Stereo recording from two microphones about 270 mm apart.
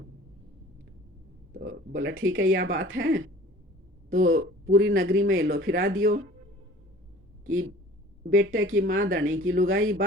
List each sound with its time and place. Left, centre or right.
1.5 s speech: right
2.0 s speech: right
4.3 s speech: right
7.4 s speech: right